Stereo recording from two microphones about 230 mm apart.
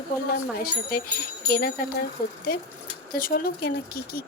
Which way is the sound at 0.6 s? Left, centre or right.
Left.